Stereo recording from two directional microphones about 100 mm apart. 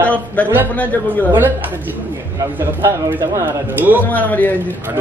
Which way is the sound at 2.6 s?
25° right (ahead or behind).